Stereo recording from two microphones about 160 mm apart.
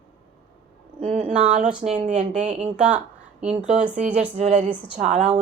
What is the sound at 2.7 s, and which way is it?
Speech, 5° right (ahead or behind).